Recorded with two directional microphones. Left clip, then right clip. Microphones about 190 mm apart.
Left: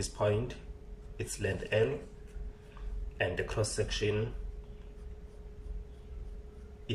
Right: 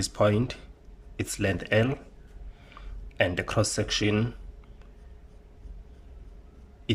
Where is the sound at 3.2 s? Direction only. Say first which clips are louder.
Right 7 dB; 55° right (ahead or behind).